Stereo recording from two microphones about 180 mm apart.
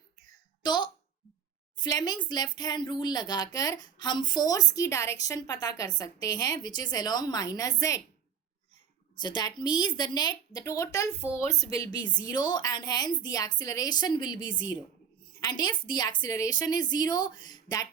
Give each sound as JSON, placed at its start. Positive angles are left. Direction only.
{"t": 0.6, "sound": "a sound", "side_deg": 25}
{"t": 1.7, "sound": "speech", "side_deg": 20}
{"t": 9.1, "sound": "a woman's voice", "side_deg": 25}